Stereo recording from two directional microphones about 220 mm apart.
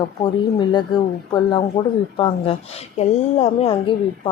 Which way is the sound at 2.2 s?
25° left (ahead or behind).